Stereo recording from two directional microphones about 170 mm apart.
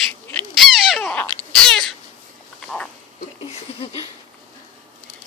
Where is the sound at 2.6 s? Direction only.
5° left (ahead or behind).